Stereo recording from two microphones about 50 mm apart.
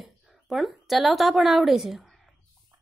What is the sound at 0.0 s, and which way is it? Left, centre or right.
A woman's voice, centre.